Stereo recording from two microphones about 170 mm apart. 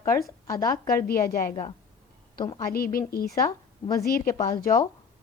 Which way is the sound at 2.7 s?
60° left (ahead or behind).